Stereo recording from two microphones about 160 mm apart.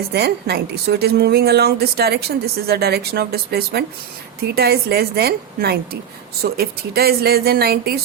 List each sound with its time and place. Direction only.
0.1 s a woman's voice: 90° right